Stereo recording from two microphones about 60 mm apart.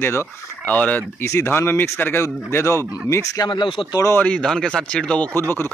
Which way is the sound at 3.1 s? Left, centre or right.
Left.